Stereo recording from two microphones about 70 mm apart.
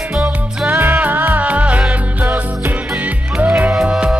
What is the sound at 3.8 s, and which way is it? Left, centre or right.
Music, centre.